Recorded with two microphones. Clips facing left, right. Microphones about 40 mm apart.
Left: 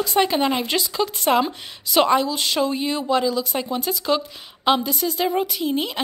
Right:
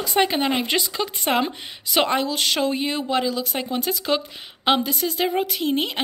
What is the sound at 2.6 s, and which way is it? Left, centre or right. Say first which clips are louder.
A woman's voice: left 1 dB; right.